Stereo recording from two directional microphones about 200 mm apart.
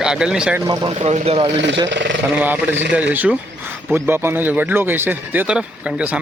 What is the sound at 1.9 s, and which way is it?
Speech, 65° right (ahead or behind).